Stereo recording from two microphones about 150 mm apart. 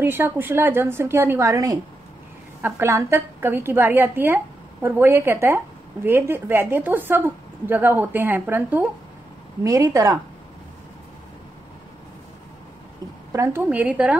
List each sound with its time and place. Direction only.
0.0 s a woman's voice: 15° right (ahead or behind)
13.3 s a woman's voice: 15° right (ahead or behind)